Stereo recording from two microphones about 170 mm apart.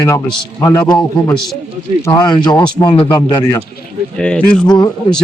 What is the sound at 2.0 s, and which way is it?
A man's voice, 25° left (ahead or behind).